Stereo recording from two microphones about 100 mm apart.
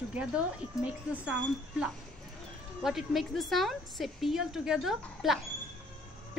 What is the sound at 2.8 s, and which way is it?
Speech, 5° right (ahead or behind).